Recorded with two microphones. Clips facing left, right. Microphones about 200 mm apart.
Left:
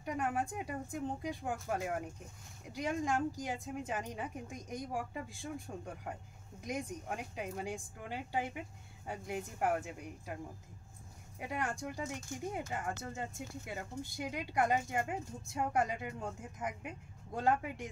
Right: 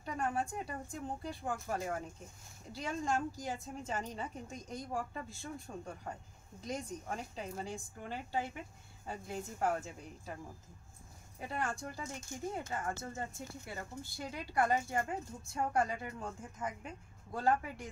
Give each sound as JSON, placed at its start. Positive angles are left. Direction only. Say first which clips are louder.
{"t": 0.0, "sound": "speech", "louder": "left 1 dB", "side_deg": 15}
{"t": 6.6, "sound": "speech", "louder": "left 1 dB", "side_deg": 15}
{"t": 11.3, "sound": "speech", "louder": "even", "side_deg": 15}